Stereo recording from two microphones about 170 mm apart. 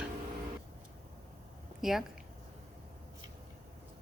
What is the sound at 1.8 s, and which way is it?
Speech, centre (ahead or behind).